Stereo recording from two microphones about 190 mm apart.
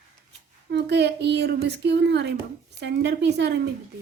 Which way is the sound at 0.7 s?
60° right (ahead or behind).